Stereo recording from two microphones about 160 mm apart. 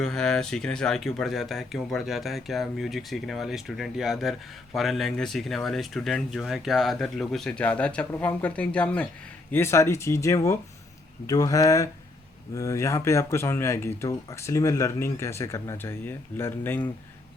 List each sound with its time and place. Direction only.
0.0 s speech: 5° left (ahead or behind)